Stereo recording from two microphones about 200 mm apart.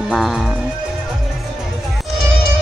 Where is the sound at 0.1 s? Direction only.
Centre (ahead or behind).